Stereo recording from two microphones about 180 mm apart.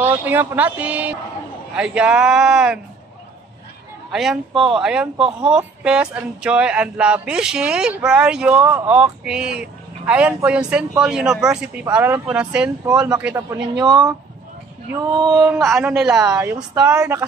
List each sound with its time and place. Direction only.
0.0 s speech: 10° right (ahead or behind)
4.1 s a man's voice: centre (ahead or behind); by 14.1 s 20° right (ahead or behind)
15.4 s speech: 5° right (ahead or behind)
16.3 s speech: 15° right (ahead or behind)